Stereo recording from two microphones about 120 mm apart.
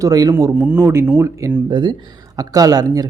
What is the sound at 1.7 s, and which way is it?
Speech, 40° right (ahead or behind).